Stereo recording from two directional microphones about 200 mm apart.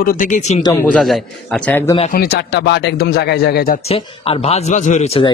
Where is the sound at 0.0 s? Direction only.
45° left (ahead or behind).